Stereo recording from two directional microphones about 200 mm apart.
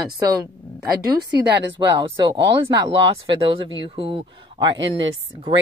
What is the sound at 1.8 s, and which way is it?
Speech, 25° right (ahead or behind).